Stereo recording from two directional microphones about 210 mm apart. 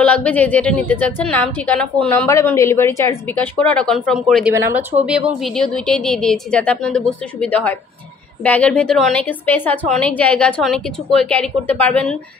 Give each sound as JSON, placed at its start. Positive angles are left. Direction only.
{"t": 0.0, "sound": "a woman's voice", "side_deg": 5}
{"t": 4.6, "sound": "a woman's voice", "side_deg": -10}